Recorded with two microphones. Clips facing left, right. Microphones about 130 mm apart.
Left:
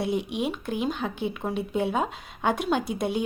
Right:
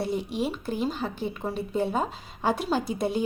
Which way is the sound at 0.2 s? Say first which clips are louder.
Even; 60° left (ahead or behind).